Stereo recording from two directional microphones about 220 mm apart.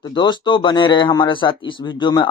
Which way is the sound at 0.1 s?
20° left (ahead or behind).